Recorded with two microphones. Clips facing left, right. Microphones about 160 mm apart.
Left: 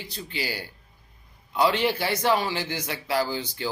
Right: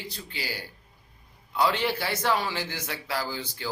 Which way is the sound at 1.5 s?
15° left (ahead or behind).